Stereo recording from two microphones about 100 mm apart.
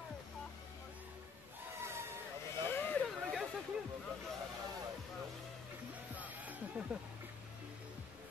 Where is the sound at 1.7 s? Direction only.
25° right (ahead or behind).